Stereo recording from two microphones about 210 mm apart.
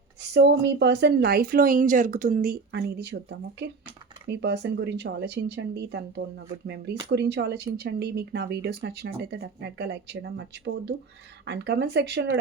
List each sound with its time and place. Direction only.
0.2 s speech: 55° right (ahead or behind)